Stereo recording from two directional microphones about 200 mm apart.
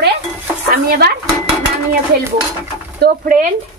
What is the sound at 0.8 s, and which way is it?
Speech, 50° right (ahead or behind).